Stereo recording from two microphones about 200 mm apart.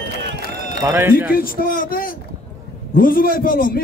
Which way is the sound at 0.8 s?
10° right (ahead or behind).